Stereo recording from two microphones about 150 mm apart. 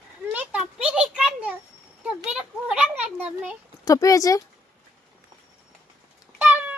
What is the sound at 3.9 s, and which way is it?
Speech, 20° left (ahead or behind).